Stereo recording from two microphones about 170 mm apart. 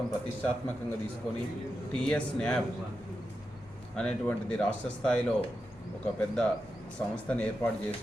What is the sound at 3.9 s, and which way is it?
Speech, 5° left (ahead or behind).